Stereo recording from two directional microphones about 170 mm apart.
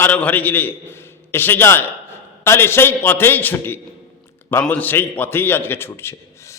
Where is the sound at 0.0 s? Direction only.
10° left (ahead or behind).